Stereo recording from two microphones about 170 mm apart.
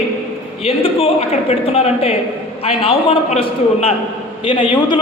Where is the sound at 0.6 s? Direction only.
35° left (ahead or behind).